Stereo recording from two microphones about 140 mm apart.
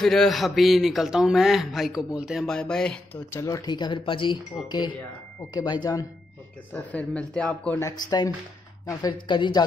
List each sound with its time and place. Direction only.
0.0 s a man's voice: centre (ahead or behind)
3.3 s speech: 25° left (ahead or behind)
6.7 s speech: 10° left (ahead or behind)
7.8 s speech: 30° left (ahead or behind)